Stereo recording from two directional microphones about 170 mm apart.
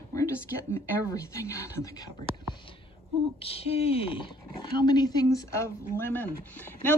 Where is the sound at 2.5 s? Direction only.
30° left (ahead or behind).